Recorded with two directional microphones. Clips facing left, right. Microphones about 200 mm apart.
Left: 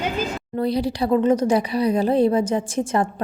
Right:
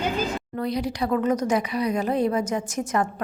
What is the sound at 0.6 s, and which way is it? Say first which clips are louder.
A woman's voice: left 5 dB; 30° left (ahead or behind).